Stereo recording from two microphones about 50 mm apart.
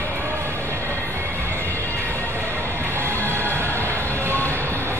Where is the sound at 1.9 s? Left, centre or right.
Left.